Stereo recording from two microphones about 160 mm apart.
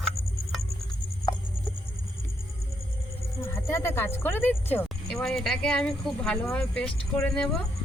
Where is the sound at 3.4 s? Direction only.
15° left (ahead or behind).